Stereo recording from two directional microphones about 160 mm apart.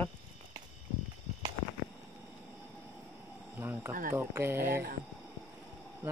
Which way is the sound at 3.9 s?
60° right (ahead or behind).